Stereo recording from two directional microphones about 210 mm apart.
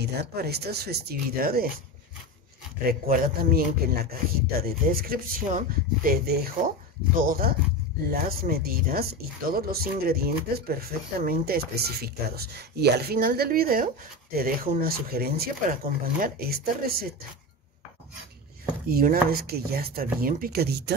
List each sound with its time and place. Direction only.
0.0 s speech: 50° right (ahead or behind)
2.9 s speech: 45° right (ahead or behind)
18.9 s speech: 45° right (ahead or behind)